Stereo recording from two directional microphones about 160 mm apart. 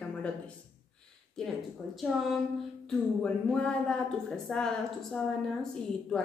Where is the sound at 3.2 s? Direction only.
5° left (ahead or behind).